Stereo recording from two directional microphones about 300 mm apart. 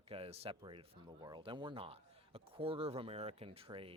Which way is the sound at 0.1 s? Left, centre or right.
Centre.